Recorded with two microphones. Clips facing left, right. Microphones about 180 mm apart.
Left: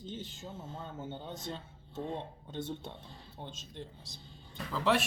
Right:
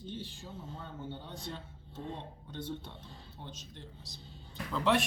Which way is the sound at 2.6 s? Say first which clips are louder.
Left 2 dB; 25° left (ahead or behind).